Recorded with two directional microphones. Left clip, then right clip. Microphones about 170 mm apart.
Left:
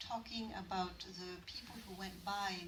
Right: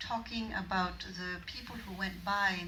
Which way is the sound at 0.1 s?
35° left (ahead or behind).